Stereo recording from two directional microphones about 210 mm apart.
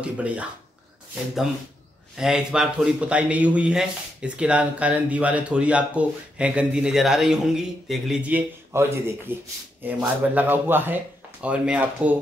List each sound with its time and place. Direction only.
0.0 s a man's voice: 5° right (ahead or behind)
2.1 s a man's voice: 5° right (ahead or behind)